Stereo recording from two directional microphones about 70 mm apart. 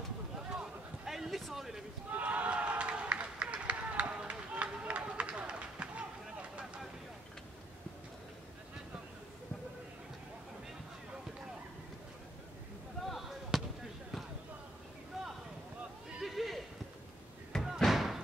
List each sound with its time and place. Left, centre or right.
0.5 s a sound: centre
2.1 s run: right
13.0 s basketball bounce: centre
16.2 s horse: centre
17.7 s slam: centre